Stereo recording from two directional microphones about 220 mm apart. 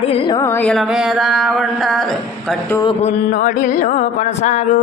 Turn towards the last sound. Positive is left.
turn(degrees=30)  # may be behind; listen again after turning